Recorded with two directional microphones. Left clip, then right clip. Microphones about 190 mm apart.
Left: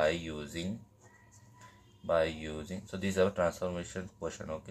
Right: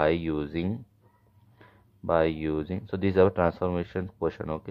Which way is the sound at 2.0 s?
40° right (ahead or behind).